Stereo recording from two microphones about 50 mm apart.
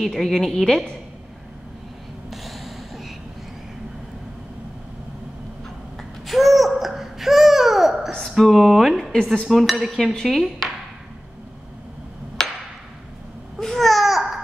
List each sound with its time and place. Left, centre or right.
0.0 s a woman's voice: centre
2.3 s a sound: centre
6.2 s babbling: centre
8.4 s a woman's voice: centre
9.1 s dishes: centre
9.5 s a woman's voice: centre
12.4 s a sound: centre
13.6 s babbling: centre